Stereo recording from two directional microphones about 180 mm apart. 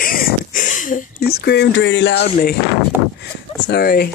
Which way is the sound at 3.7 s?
60° left (ahead or behind).